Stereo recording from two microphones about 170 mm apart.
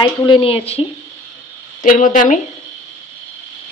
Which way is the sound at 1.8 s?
50° left (ahead or behind).